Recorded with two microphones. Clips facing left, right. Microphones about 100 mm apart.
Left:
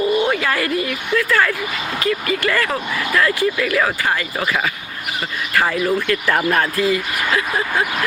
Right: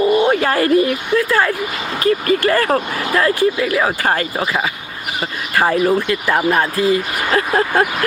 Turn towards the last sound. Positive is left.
turn(degrees=-45)  # may be behind; listen again after turning